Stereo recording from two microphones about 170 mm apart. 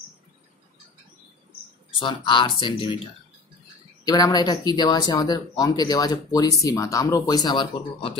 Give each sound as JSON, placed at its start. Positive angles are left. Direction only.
{"t": 2.0, "sound": "speech", "side_deg": 30}
{"t": 4.0, "sound": "speech", "side_deg": 25}